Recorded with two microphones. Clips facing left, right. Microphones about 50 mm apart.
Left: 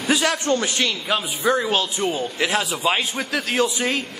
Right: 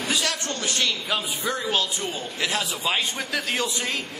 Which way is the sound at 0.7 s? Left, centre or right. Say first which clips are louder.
Left 3 dB; centre.